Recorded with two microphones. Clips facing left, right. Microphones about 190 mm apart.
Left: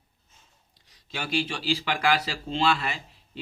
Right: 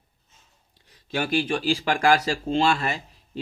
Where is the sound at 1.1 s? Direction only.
50° right (ahead or behind).